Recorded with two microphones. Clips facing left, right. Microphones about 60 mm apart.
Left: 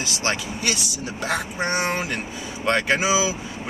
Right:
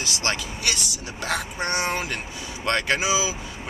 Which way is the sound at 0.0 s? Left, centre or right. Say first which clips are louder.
Left 2 dB; centre.